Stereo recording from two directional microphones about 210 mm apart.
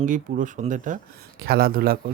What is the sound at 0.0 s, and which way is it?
A man's voice, 40° right (ahead or behind).